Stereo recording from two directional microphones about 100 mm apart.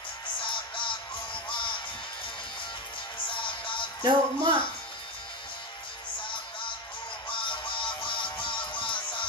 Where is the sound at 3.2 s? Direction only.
55° left (ahead or behind).